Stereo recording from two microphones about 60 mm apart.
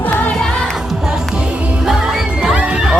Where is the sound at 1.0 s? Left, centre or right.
Centre.